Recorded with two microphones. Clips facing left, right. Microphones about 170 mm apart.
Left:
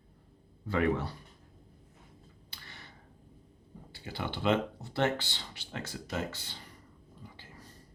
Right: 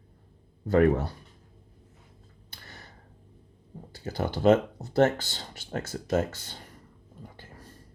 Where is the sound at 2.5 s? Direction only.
45° right (ahead or behind).